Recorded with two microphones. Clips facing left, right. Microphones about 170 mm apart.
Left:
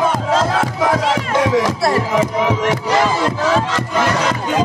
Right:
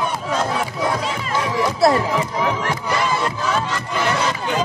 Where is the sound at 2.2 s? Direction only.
90° left.